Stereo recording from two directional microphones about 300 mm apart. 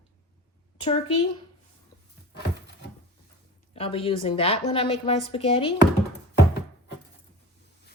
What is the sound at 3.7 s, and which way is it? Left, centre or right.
A woman's voice, centre.